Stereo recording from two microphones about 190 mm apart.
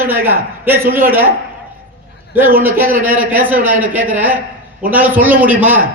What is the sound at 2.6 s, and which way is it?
A man's voice, 10° right (ahead or behind).